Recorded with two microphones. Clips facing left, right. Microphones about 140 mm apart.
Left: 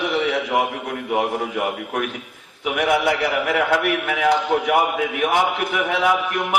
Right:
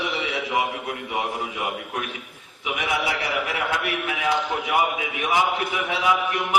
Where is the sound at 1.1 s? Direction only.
60° left (ahead or behind).